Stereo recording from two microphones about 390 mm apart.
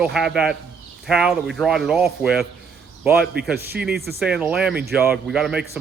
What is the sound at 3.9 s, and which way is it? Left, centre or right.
Speech, right.